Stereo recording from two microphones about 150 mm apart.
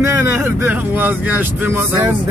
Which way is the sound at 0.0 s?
15° right (ahead or behind).